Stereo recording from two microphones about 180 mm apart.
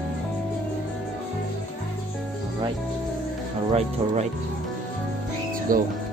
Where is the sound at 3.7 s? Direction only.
40° right (ahead or behind).